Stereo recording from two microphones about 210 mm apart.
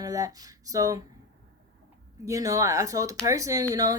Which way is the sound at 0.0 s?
15° right (ahead or behind).